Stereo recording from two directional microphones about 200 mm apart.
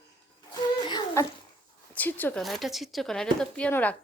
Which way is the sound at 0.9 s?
20° left (ahead or behind).